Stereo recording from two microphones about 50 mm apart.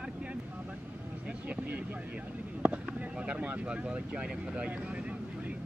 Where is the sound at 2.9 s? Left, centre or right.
Right.